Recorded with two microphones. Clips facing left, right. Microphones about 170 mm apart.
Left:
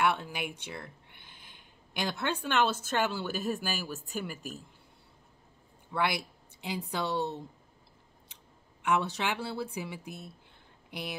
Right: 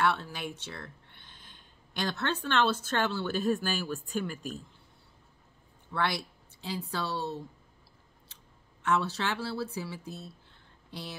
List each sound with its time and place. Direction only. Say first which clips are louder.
0.0 s speech: even; 15° left (ahead or behind)
5.9 s speech: left 1 dB; 15° left (ahead or behind)
8.8 s speech: even; 15° left (ahead or behind)